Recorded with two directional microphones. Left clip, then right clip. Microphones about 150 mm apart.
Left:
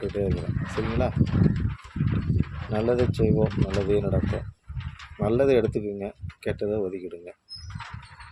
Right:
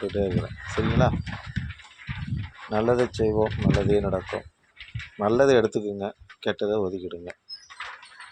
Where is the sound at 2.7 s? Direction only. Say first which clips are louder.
Right 2 dB; centre (ahead or behind).